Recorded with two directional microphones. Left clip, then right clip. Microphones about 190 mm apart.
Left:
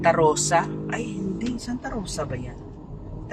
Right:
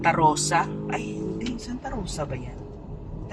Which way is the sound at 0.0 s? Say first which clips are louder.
Left 1 dB; 30° left (ahead or behind).